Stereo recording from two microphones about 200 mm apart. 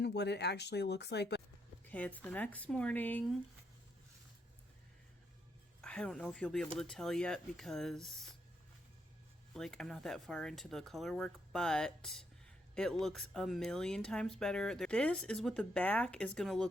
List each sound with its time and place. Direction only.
0.0 s speech: 55° left (ahead or behind)
1.8 s speech: 5° left (ahead or behind)
5.8 s speech: 5° left (ahead or behind)
9.6 s speech: centre (ahead or behind)